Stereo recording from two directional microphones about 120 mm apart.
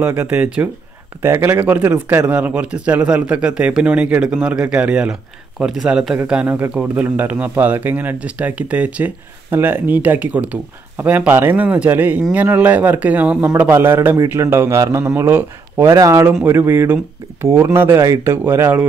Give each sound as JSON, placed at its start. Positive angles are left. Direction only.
{"t": 0.0, "sound": "a man's voice", "side_deg": -20}